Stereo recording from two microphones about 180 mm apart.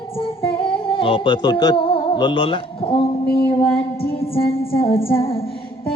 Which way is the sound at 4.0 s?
30° left (ahead or behind).